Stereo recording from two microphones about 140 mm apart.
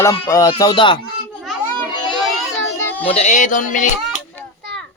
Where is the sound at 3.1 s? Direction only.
55° left (ahead or behind).